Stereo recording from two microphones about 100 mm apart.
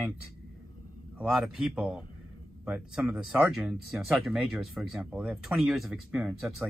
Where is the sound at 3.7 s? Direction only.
Centre (ahead or behind).